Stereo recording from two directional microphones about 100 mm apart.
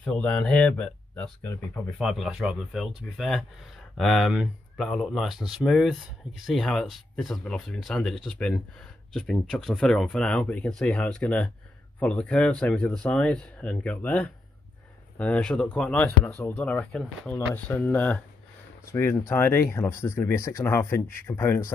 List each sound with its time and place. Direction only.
0.0 s speech: 10° left (ahead or behind)
2.0 s speech: centre (ahead or behind); by 21.7 s 25° left (ahead or behind)